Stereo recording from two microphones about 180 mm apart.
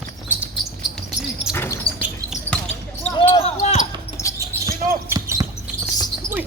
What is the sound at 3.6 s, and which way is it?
Basketball bounce, 40° left (ahead or behind).